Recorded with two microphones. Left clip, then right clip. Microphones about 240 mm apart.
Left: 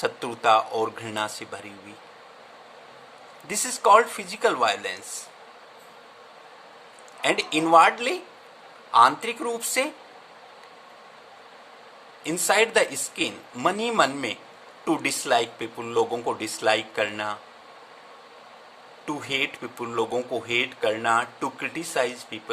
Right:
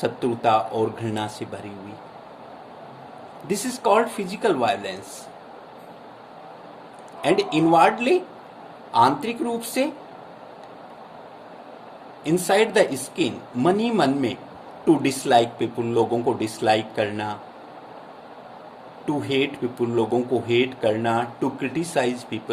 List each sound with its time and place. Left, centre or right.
0.0 s speech: left
3.4 s speech: left
7.2 s speech: left
12.2 s speech: left
19.0 s speech: left